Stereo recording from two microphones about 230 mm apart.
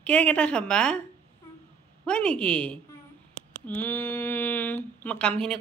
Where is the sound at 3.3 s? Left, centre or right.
Right.